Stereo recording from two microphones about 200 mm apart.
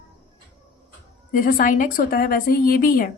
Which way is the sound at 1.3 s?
45° left (ahead or behind).